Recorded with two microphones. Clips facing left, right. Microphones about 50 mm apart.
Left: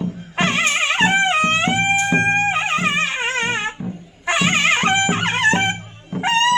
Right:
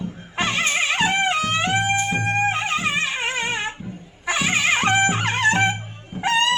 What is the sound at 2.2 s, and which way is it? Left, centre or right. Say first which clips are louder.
Music: left 4 dB; left.